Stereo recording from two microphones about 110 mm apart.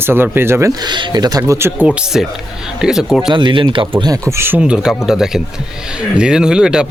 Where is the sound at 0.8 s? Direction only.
40° right (ahead or behind); by 1.9 s 25° right (ahead or behind).